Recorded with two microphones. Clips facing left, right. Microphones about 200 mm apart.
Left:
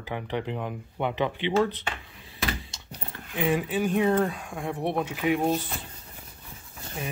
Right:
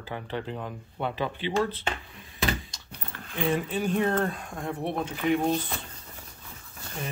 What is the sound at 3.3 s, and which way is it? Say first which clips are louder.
Speech: left 2 dB; 10° left (ahead or behind).